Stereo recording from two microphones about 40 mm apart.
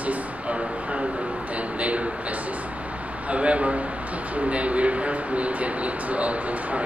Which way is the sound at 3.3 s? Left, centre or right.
Right.